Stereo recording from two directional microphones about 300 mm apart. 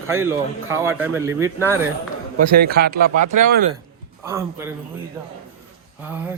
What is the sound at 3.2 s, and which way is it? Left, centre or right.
Speech, right.